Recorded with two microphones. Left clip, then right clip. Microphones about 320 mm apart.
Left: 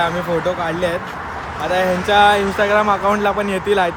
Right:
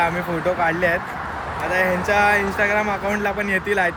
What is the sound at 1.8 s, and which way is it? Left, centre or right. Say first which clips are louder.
Speech: left 5 dB; centre.